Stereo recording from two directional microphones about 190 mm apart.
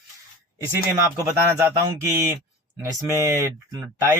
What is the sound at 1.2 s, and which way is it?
Speech, 15° right (ahead or behind).